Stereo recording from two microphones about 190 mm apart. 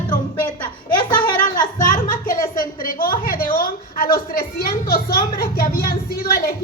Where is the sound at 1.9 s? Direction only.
45° left (ahead or behind).